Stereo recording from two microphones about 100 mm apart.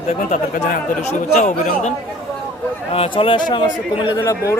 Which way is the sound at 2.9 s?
65° left (ahead or behind).